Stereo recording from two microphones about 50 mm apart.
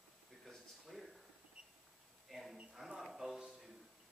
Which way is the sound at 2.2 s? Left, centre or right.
Centre.